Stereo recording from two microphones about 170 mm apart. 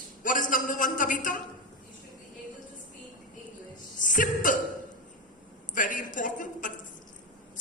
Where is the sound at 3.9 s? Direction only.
50° left (ahead or behind).